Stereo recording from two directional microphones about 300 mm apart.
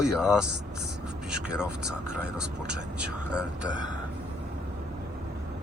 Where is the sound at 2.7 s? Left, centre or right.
Right.